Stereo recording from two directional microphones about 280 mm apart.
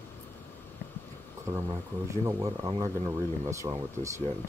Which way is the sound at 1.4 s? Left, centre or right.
Centre.